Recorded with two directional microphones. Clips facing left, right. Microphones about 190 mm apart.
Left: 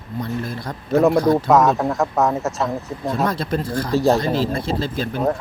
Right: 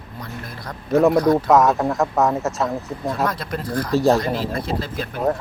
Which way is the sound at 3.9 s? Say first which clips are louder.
Even; centre (ahead or behind).